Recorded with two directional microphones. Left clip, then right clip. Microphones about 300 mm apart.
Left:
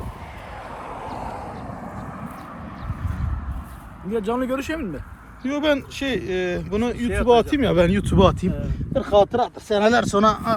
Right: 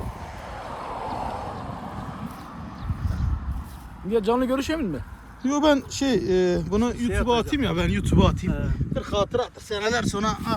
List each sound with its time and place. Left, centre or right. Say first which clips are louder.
0.7 s boat: right 2 dB; right
1.3 s vehicle: right 1 dB; centre
4.1 s speech: right 1 dB; right
5.5 s speech: right 1 dB; centre